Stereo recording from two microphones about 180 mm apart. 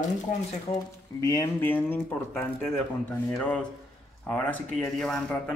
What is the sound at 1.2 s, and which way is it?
Speech, 20° left (ahead or behind).